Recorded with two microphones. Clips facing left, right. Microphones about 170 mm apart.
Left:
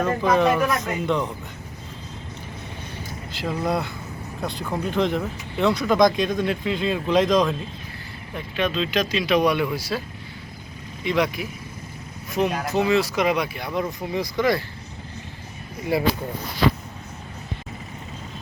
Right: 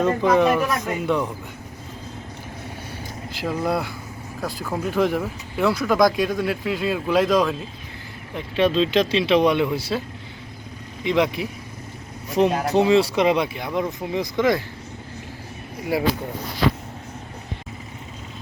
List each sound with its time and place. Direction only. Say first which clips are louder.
0.0 s speech: right 2 dB; 15° right (ahead or behind)
3.3 s speech: right 1 dB; 10° right (ahead or behind)
8.5 s speech: right 5 dB; 30° right (ahead or behind)
11.0 s speech: right 2 dB; 20° right (ahead or behind)
15.9 s speech: even; 10° right (ahead or behind)